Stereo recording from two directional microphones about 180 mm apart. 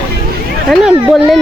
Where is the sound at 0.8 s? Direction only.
Centre (ahead or behind).